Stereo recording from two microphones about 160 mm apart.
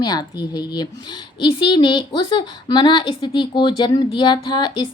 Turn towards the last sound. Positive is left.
turn(degrees=30)  # may be behind; listen again after turning